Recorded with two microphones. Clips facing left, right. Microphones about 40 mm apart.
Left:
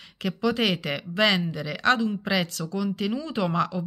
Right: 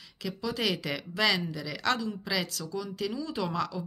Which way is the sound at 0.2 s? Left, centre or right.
Left.